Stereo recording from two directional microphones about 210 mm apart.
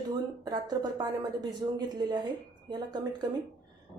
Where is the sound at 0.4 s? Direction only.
20° right (ahead or behind).